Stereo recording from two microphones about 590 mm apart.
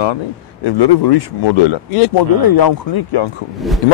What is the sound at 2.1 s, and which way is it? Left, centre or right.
Speech, left.